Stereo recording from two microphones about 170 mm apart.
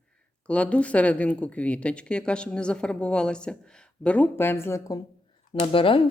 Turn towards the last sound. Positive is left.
turn(degrees=30)  # may be behind; listen again after turning